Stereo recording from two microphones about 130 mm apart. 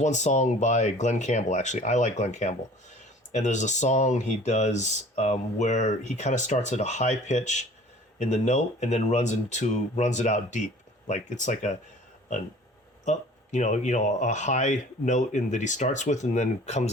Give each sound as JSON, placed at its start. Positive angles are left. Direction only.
{"t": 0.0, "sound": "speech", "side_deg": 65}
{"t": 13.1, "sound": "speech", "side_deg": 70}